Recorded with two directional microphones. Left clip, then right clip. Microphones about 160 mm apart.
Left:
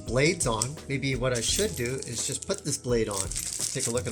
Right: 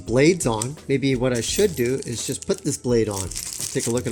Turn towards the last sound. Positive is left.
turn(degrees=-55)  # may be behind; listen again after turning